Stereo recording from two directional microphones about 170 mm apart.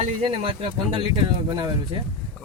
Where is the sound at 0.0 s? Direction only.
35° right (ahead or behind).